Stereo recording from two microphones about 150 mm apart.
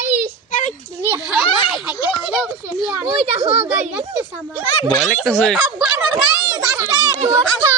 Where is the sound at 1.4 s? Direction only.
35° left (ahead or behind).